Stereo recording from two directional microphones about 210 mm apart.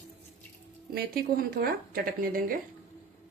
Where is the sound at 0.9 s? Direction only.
45° right (ahead or behind).